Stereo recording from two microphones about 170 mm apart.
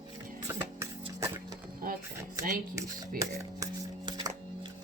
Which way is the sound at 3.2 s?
25° right (ahead or behind).